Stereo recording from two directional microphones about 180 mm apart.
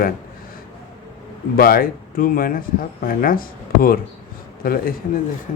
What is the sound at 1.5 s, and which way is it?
Speech, 55° left (ahead or behind).